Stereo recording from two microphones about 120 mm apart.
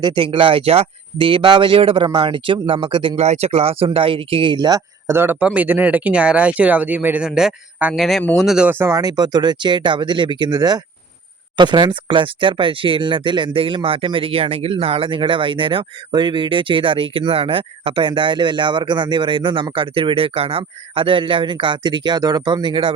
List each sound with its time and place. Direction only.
0.0 s speech: 45° right (ahead or behind)
3.2 s speech: 60° right (ahead or behind); by 4.8 s 35° right (ahead or behind)
5.0 s speech: 20° right (ahead or behind)
8.7 s speech: 25° right (ahead or behind); by 23.0 s 45° right (ahead or behind)